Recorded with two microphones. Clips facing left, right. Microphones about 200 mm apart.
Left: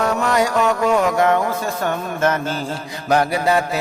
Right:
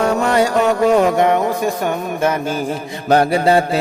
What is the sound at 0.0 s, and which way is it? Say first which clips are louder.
Music: right 3 dB; 30° right (ahead or behind).